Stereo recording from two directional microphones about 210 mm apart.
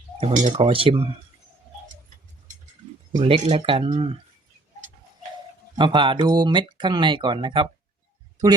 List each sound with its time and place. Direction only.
0.2 s speech: 35° right (ahead or behind)
3.1 s speech: 25° right (ahead or behind)
5.7 s speech: 20° right (ahead or behind)